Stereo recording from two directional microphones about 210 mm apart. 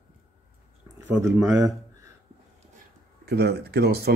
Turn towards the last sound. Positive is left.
turn(degrees=-50)  # may be behind; listen again after turning